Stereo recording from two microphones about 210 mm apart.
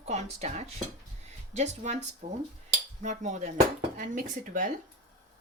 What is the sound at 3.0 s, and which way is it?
Speech, 35° right (ahead or behind).